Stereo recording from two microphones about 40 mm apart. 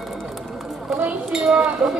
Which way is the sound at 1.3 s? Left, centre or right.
Centre.